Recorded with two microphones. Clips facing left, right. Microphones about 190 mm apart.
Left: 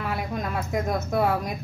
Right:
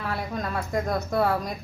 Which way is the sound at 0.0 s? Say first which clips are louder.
Left 1 dB; 5° left (ahead or behind).